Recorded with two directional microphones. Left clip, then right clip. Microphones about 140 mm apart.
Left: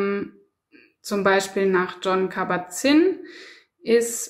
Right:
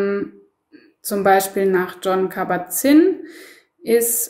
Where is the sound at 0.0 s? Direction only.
25° left (ahead or behind).